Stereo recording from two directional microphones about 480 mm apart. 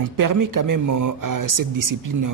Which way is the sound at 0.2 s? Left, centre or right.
Right.